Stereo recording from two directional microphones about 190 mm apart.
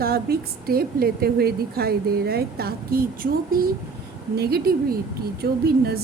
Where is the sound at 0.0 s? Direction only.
55° right (ahead or behind).